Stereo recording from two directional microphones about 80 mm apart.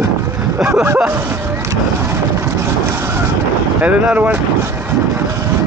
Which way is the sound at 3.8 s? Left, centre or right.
Centre.